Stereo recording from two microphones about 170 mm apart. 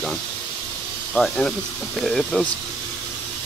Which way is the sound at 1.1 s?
5° left (ahead or behind).